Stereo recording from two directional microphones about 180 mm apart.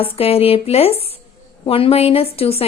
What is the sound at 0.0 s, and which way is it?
A woman's voice, 35° left (ahead or behind).